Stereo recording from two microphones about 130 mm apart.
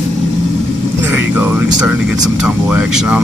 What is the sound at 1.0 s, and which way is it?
Vehicle, 15° right (ahead or behind).